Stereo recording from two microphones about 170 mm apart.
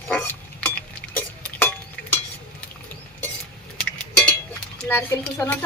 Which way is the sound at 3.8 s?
10° left (ahead or behind).